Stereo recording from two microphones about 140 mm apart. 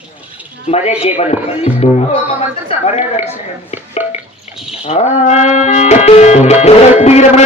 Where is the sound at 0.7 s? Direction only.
50° left (ahead or behind).